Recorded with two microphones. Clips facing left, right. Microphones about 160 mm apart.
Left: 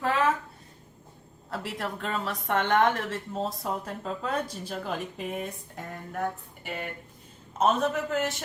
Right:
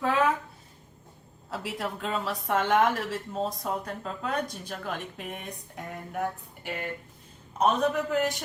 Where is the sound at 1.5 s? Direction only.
Centre (ahead or behind).